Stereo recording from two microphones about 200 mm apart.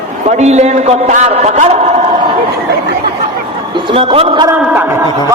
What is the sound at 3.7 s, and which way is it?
Speech, 25° right (ahead or behind).